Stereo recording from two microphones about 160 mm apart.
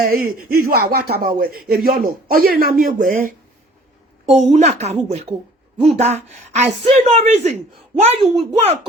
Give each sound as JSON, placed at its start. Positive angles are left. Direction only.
{"t": 0.0, "sound": "speech", "side_deg": -65}
{"t": 4.3, "sound": "a child's voice", "side_deg": -45}